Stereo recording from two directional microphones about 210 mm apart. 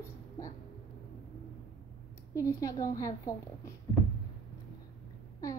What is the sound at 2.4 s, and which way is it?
Speech, 15° left (ahead or behind).